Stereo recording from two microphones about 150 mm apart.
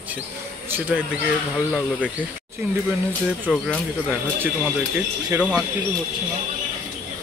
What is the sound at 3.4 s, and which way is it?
Speech, 5° left (ahead or behind).